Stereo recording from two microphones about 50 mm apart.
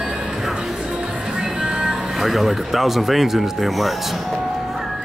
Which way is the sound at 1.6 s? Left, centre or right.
Centre.